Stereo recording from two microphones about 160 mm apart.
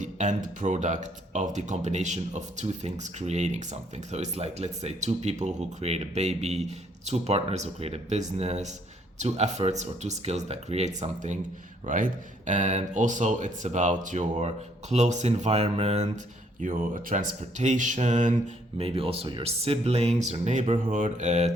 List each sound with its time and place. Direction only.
0.0 s speech: 50° right (ahead or behind)
16.6 s speech: 55° right (ahead or behind)
18.8 s speech: 35° right (ahead or behind)